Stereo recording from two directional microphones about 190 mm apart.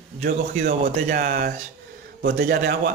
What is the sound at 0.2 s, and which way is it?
Speech, 50° right (ahead or behind).